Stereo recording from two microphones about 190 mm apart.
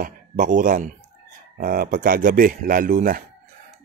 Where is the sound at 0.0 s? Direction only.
45° right (ahead or behind).